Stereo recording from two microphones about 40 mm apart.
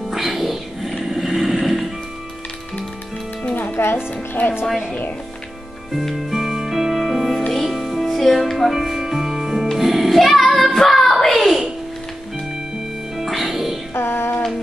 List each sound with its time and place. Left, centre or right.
0.1 s music: centre
1.0 s vehicle: centre
3.5 s music: left
6.1 s music: centre
8.7 s music: centre
10.8 s child singing: centre
11.3 s a sound: centre
13.2 s music: centre
13.9 s music: left